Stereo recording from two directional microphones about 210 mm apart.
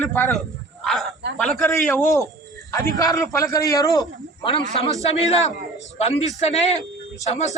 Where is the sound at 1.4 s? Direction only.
Centre (ahead or behind).